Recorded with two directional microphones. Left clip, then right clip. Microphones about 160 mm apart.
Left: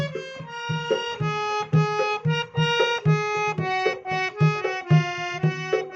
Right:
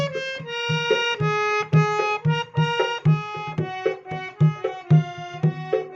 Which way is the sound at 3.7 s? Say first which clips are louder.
Left 3 dB; 55° left (ahead or behind).